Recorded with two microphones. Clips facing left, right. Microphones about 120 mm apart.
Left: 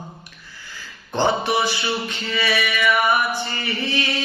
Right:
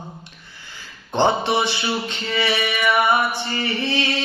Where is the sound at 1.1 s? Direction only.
25° right (ahead or behind).